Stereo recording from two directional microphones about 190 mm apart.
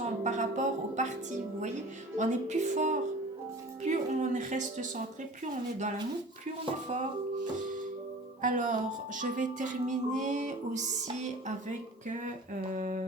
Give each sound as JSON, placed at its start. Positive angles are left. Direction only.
{"t": 0.0, "sound": "a woman's voice", "side_deg": -40}
{"t": 8.4, "sound": "speech", "side_deg": -45}
{"t": 12.7, "sound": "a sound", "side_deg": -45}